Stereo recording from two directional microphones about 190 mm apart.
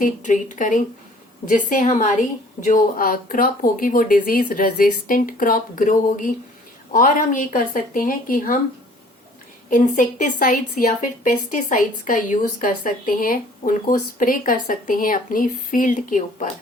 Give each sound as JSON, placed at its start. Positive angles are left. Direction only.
{"t": 0.0, "sound": "a woman's voice", "side_deg": 40}
{"t": 9.6, "sound": "a woman's voice", "side_deg": 45}